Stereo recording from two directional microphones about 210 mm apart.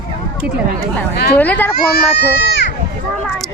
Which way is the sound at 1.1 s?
50° left (ahead or behind).